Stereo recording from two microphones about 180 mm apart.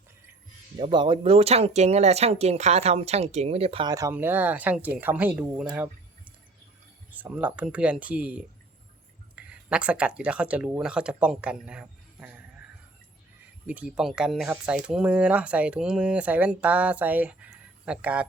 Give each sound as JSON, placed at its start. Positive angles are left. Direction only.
{"t": 0.8, "sound": "speech", "side_deg": -25}
{"t": 13.7, "sound": "speech", "side_deg": -5}